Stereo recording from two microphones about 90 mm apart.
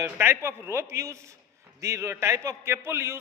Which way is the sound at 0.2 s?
25° right (ahead or behind).